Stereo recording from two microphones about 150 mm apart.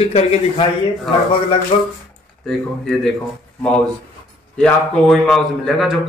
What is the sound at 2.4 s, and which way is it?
Speech, 5° left (ahead or behind).